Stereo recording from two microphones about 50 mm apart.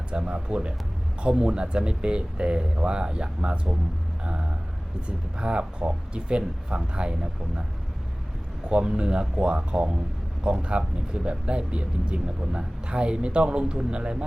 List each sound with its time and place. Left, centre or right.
0.1 s speech: right
4.2 s vehicle: right
5.0 s speech: right
8.7 s speech: centre